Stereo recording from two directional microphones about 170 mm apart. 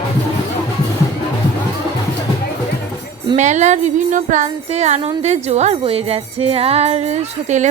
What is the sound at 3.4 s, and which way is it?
Music, 45° right (ahead or behind).